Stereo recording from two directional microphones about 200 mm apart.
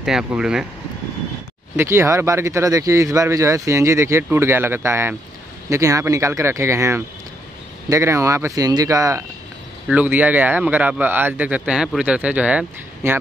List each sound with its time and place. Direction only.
0.0 s speech: 5° right (ahead or behind)
1.8 s speech: 15° right (ahead or behind)